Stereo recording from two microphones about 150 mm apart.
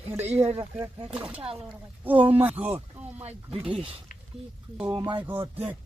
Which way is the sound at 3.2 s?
40° right (ahead or behind).